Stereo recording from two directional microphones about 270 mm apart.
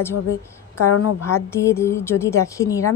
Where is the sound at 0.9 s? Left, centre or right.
Left.